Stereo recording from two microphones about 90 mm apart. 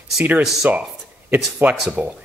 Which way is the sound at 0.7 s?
20° right (ahead or behind).